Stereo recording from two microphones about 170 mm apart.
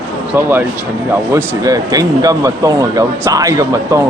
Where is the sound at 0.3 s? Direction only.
15° right (ahead or behind).